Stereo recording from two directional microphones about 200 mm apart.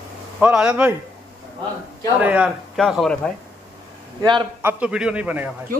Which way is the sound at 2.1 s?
5° right (ahead or behind).